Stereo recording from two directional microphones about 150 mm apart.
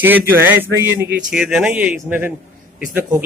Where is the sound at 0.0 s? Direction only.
15° right (ahead or behind).